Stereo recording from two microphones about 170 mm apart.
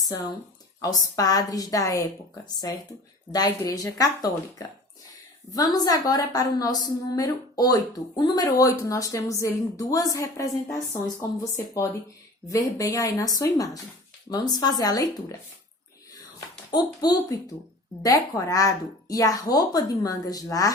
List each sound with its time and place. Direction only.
0.8 s a woman's voice: 20° left (ahead or behind)
3.3 s a woman's voice: 20° left (ahead or behind)
16.7 s a woman's voice: 25° left (ahead or behind)